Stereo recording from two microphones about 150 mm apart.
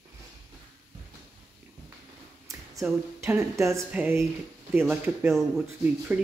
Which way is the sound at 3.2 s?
20° right (ahead or behind).